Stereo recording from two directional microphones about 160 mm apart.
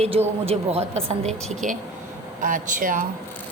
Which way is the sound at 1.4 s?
50° right (ahead or behind).